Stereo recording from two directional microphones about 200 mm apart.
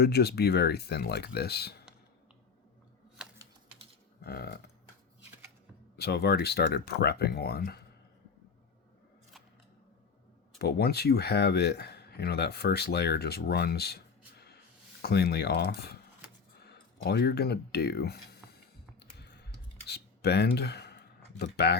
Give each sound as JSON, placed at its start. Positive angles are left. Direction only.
{"t": 0.0, "sound": "speech", "side_deg": 55}
{"t": 3.2, "sound": "typing", "side_deg": -5}
{"t": 4.2, "sound": "a sound", "side_deg": 50}
{"t": 6.0, "sound": "speech", "side_deg": 50}
{"t": 10.6, "sound": "speech", "side_deg": 55}
{"t": 17.0, "sound": "a sound", "side_deg": 55}